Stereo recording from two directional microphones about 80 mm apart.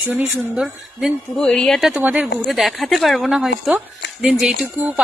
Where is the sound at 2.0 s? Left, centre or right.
Right.